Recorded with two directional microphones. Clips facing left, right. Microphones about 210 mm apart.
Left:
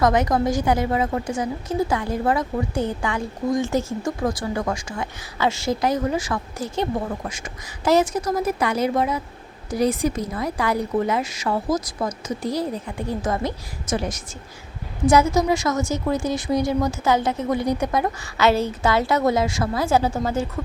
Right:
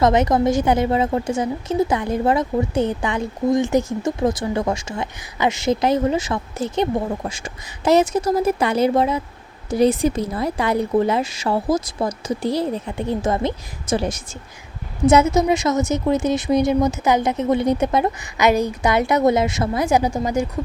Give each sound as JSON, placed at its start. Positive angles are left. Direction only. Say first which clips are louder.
{"t": 0.0, "sound": "a woman's voice", "louder": "right 3 dB", "side_deg": -25}